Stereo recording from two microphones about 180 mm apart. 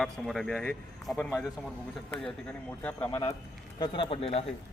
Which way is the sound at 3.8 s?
30° left (ahead or behind).